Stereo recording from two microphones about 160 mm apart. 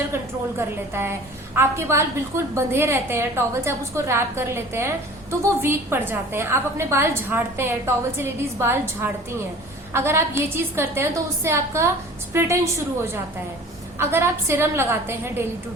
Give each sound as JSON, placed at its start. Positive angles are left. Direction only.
{"t": 1.5, "sound": "a woman's voice", "side_deg": -15}